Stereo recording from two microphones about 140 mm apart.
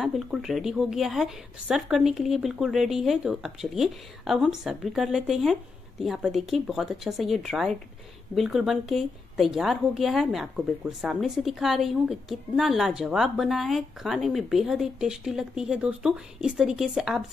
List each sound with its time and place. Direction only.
0.0 s a woman's voice: 5° right (ahead or behind)